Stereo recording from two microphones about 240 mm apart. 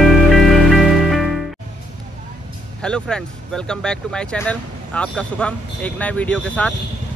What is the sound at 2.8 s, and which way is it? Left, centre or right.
Speech, centre.